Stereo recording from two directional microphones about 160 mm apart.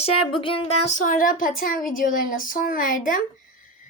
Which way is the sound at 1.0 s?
60° left (ahead or behind).